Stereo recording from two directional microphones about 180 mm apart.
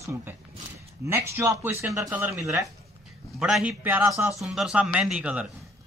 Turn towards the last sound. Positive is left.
turn(degrees=-5)  # may be behind; listen again after turning